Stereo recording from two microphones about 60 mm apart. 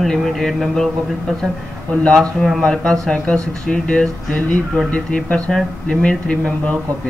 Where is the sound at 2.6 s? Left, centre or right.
Centre.